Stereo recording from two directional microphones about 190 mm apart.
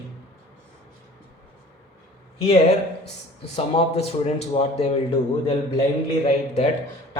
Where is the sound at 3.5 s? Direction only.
35° left (ahead or behind).